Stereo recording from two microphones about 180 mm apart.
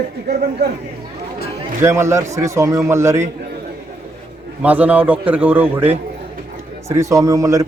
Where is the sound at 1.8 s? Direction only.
15° right (ahead or behind).